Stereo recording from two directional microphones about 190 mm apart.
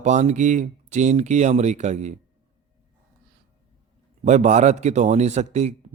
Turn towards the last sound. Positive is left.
turn(degrees=-35)  # may be behind; listen again after turning